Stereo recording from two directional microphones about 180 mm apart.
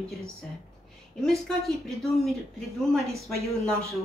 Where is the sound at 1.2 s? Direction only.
Centre (ahead or behind).